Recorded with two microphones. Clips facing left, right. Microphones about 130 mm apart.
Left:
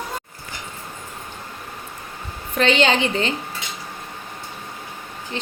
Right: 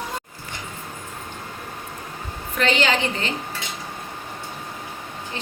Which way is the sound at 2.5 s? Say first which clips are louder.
Left 3 dB; 25° left (ahead or behind).